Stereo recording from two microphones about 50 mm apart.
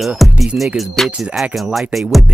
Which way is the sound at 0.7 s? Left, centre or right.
Centre.